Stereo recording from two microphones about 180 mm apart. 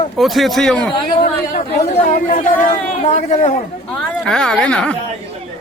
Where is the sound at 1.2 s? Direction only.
45° left (ahead or behind).